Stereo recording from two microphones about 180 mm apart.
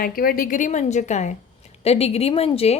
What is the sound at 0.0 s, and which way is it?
A woman's voice, 55° left (ahead or behind).